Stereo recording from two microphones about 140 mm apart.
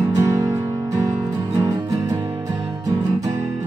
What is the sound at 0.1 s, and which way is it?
Music, 25° right (ahead or behind).